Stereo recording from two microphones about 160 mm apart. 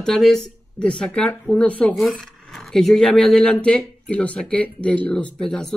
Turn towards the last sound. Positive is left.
turn(degrees=5)  # may be behind; listen again after turning